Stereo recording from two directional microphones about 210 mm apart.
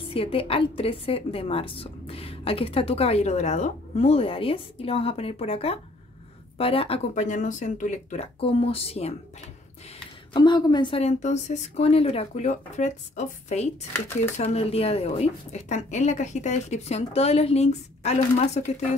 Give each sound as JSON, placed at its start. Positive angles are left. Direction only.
{"t": 0.1, "sound": "a woman's voice", "side_deg": 25}
{"t": 10.3, "sound": "a woman's voice", "side_deg": 20}